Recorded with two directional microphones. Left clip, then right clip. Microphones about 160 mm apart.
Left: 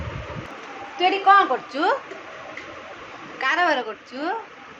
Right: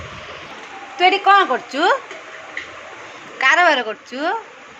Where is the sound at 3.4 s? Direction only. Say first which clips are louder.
Right 7 dB; 45° right (ahead or behind).